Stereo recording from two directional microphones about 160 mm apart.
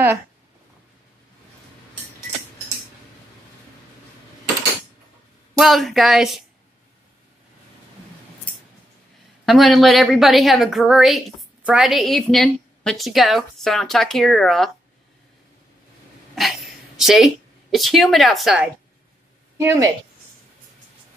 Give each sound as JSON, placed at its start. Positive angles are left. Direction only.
{"t": 5.6, "sound": "a woman's voice", "side_deg": 0}
{"t": 9.5, "sound": "a woman's voice", "side_deg": 0}
{"t": 16.3, "sound": "a woman's voice", "side_deg": 0}
{"t": 19.6, "sound": "a woman's voice", "side_deg": -15}